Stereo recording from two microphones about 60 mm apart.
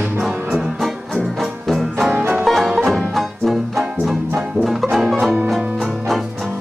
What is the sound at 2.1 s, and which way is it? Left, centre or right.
Music, right.